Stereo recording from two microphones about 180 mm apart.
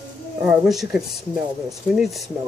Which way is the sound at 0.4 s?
Centre (ahead or behind).